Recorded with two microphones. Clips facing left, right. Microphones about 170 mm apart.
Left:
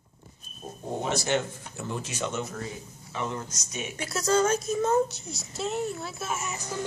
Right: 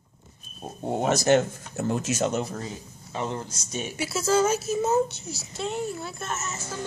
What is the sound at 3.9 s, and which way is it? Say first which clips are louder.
A child's voice: right 2 dB; 5° right (ahead or behind).